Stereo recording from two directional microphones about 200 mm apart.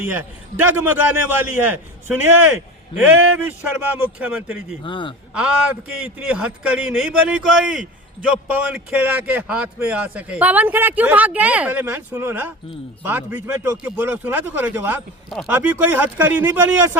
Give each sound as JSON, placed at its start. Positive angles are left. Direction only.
{"t": 0.0, "sound": "speech", "side_deg": -10}
{"t": 4.8, "sound": "a man's voice", "side_deg": 25}
{"t": 6.0, "sound": "speech", "side_deg": -10}